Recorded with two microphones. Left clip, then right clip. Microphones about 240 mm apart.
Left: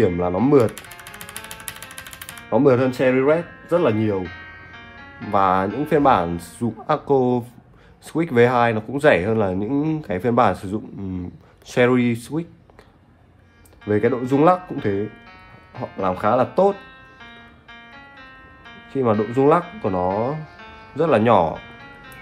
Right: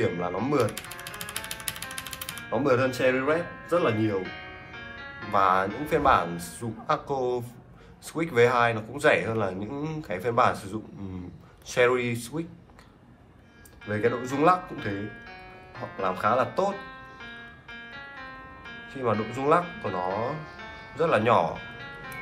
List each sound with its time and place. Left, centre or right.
0.0 s speech: left
1.7 s music: centre
2.5 s speech: left
5.3 s speech: left
13.8 s speech: left
16.0 s speech: left
17.2 s music: right
18.9 s speech: left
21.0 s speech: left